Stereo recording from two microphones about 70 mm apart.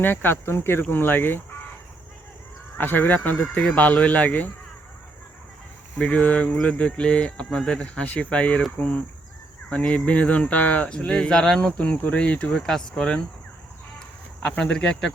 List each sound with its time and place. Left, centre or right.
0.0 s speech: left
2.7 s speech: left
6.0 s speech: centre
14.6 s speech: centre